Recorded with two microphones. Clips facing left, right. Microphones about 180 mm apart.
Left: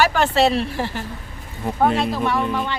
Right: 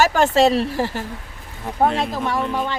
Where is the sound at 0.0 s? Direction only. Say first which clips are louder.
Right 2 dB; 45° right (ahead or behind).